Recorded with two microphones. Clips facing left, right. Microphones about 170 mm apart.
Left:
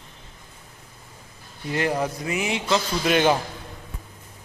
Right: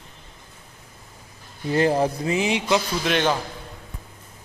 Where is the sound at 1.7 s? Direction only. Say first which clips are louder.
Right 5 dB; 30° right (ahead or behind).